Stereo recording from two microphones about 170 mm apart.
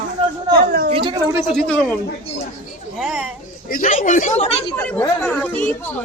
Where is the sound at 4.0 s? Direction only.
50° left (ahead or behind).